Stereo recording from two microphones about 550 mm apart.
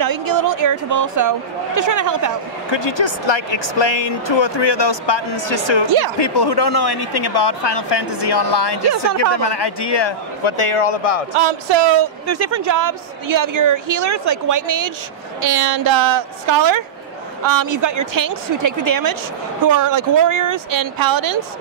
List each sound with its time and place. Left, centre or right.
0.0 s a woman's voice: right
2.7 s a man's voice: left
11.3 s speech: right
12.3 s a woman's voice: right